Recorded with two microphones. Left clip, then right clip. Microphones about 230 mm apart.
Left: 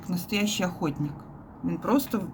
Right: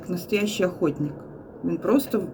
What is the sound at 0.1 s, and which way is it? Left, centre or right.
Speech, left.